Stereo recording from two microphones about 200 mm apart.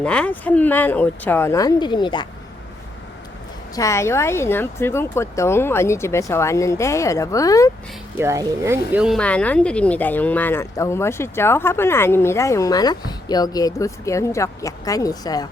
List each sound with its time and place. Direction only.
0.0 s speech: 5° left (ahead or behind); by 2.2 s 25° left (ahead or behind)
3.8 s speech: 15° left (ahead or behind)
8.2 s speech: 15° right (ahead or behind); by 15.4 s 20° left (ahead or behind)